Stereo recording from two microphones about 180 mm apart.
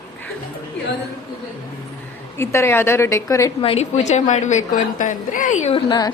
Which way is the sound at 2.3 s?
15° left (ahead or behind).